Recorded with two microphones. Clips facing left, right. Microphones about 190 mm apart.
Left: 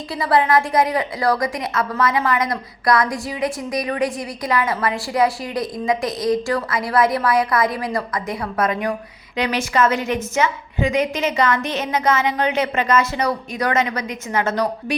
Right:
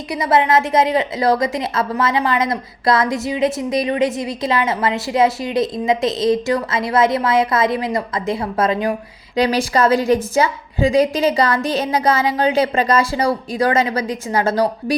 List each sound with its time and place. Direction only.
0.1 s a woman's voice: 20° right (ahead or behind)